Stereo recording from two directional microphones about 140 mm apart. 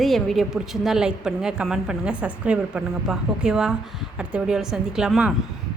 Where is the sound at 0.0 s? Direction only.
Centre (ahead or behind).